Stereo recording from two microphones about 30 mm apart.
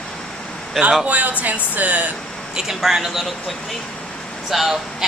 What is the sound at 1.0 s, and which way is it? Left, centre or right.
Speech, right.